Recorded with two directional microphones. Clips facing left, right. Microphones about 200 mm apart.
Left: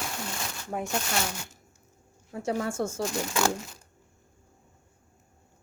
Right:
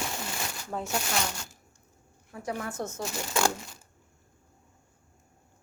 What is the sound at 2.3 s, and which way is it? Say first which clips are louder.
Speech: left 5 dB; 30° left (ahead or behind).